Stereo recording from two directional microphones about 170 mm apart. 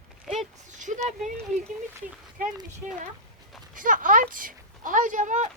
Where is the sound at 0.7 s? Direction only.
45° right (ahead or behind).